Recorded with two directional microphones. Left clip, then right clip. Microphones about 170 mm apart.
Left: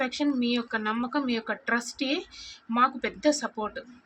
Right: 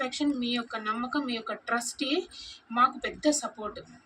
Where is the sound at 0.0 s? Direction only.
40° left (ahead or behind).